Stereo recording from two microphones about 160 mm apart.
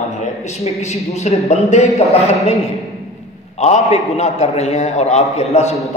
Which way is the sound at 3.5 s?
45° left (ahead or behind).